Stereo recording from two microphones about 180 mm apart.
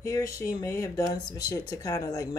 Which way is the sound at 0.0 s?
15° left (ahead or behind).